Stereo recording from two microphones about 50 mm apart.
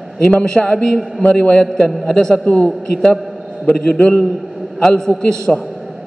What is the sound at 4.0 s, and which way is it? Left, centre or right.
Speech, left.